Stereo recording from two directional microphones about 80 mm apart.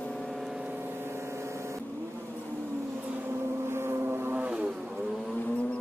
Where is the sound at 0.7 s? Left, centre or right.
Right.